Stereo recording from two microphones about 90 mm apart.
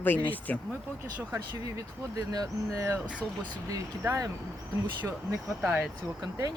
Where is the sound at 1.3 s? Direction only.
30° right (ahead or behind).